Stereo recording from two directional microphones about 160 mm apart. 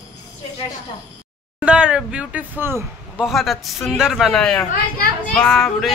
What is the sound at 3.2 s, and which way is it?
A man's voice, centre (ahead or behind).